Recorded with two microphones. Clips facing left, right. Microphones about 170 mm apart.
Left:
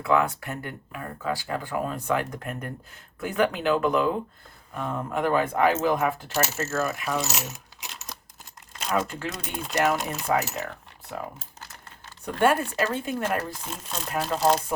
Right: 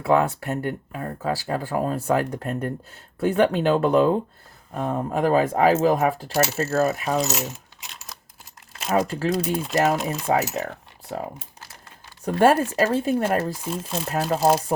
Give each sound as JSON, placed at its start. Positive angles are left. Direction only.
{"t": 0.0, "sound": "speech", "side_deg": -40}
{"t": 7.3, "sound": "coin", "side_deg": 0}
{"t": 8.9, "sound": "speech", "side_deg": -40}
{"t": 9.4, "sound": "speech", "side_deg": 0}
{"t": 10.2, "sound": "speech", "side_deg": -40}
{"t": 12.2, "sound": "speech", "side_deg": -40}
{"t": 13.7, "sound": "speech", "side_deg": -5}
{"t": 14.1, "sound": "speech", "side_deg": -40}